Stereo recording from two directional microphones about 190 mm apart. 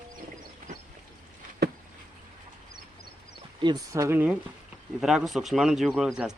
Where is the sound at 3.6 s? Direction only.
20° right (ahead or behind).